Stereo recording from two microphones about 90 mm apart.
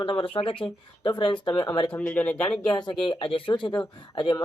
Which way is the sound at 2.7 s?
55° left (ahead or behind).